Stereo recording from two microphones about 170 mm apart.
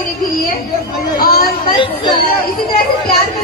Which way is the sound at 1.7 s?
30° left (ahead or behind).